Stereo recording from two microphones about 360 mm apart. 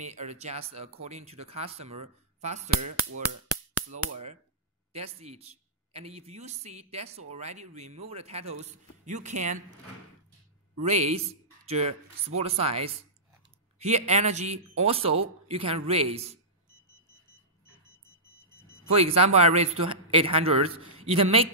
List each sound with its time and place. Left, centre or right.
0.0 s a man's voice: centre
2.8 s speech: right
4.9 s a man's voice: centre
10.8 s a man's voice: centre
18.9 s a man's voice: centre